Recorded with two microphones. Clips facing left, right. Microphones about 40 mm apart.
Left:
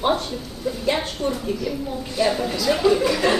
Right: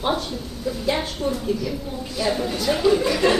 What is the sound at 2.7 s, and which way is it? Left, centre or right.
Speech, left.